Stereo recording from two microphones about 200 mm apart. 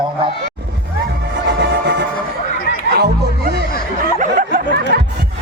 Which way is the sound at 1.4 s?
55° right (ahead or behind).